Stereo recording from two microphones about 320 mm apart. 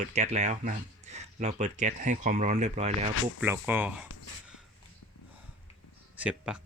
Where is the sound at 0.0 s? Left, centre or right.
Right.